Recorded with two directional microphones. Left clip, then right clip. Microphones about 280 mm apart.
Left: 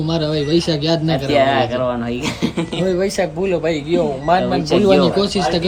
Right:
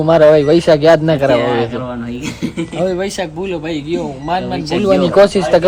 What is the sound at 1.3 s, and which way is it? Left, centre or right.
Speech, centre.